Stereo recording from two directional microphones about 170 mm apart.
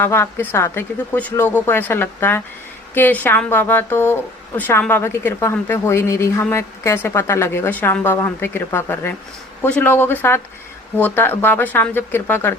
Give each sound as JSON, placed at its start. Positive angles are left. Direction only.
{"t": 0.0, "sound": "a woman's voice", "side_deg": 15}